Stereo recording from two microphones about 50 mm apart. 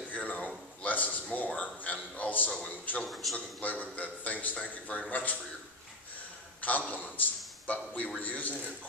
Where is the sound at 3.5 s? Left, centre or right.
Left.